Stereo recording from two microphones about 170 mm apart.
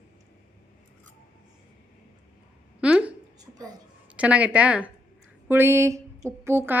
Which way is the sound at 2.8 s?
5° right (ahead or behind).